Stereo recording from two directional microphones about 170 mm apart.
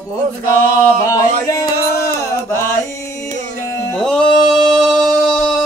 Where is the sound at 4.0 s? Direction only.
5° left (ahead or behind).